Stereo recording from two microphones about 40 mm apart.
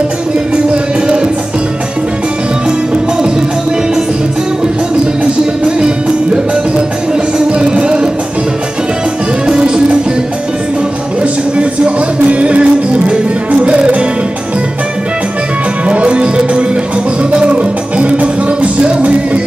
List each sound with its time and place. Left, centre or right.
5.2 s music: right
7.3 s music: right
11.5 s music: right
15.9 s music: right